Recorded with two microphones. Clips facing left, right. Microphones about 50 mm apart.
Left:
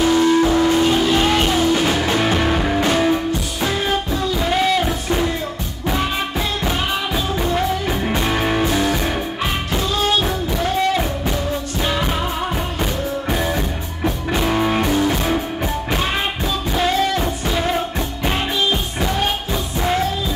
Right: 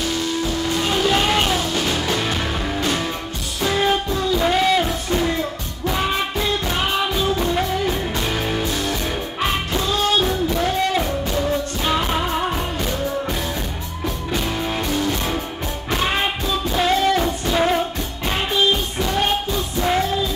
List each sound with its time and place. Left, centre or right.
0.0 s music: left
0.9 s music: centre
1.6 s music: left
4.3 s music: centre
7.8 s music: centre
10.5 s music: centre
14.0 s music: left
16.7 s music: centre